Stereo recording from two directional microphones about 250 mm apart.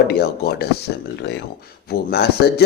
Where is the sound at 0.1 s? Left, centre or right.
Left.